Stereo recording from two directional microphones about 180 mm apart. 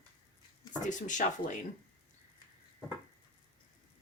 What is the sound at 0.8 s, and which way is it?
Speech, 45° left (ahead or behind).